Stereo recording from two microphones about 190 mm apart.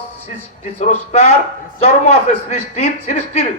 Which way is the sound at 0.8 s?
35° left (ahead or behind).